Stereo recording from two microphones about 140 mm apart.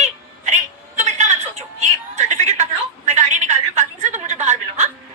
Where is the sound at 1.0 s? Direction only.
55° right (ahead or behind).